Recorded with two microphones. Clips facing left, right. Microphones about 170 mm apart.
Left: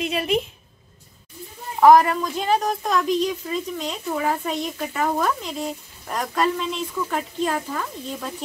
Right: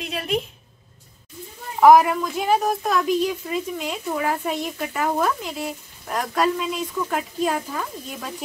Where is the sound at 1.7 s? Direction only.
5° right (ahead or behind).